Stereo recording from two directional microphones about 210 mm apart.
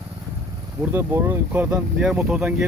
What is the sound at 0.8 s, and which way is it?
Speech, 10° right (ahead or behind).